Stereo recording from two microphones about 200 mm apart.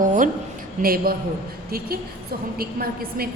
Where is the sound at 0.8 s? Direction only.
45° right (ahead or behind).